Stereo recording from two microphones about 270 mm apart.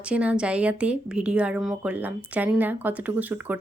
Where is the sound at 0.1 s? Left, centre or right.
Centre.